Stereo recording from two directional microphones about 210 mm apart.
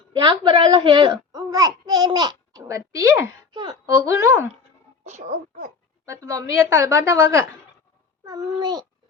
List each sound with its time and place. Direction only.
0.1 s a child's voice: 20° right (ahead or behind)
6.1 s a child's voice: 15° right (ahead or behind)